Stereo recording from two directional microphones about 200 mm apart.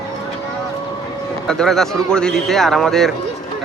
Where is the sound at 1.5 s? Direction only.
Centre (ahead or behind).